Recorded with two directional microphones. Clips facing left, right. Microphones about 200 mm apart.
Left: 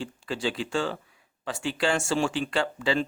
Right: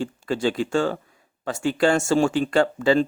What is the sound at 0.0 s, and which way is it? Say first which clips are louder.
Speech: right 7 dB; 50° right (ahead or behind).